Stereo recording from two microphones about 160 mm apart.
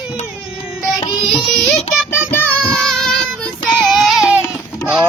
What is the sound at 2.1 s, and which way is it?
Child singing, 10° left (ahead or behind).